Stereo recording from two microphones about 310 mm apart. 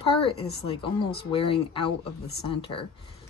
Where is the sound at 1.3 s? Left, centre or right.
Centre.